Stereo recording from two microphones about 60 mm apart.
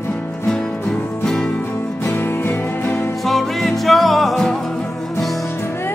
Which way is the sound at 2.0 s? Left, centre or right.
Left.